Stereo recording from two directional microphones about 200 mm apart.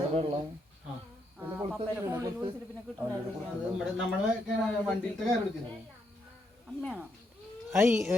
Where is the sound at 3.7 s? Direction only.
5° right (ahead or behind).